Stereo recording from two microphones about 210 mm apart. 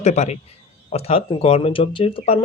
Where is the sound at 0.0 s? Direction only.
30° left (ahead or behind).